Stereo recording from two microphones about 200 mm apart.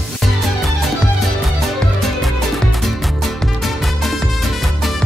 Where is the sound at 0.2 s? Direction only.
Centre (ahead or behind).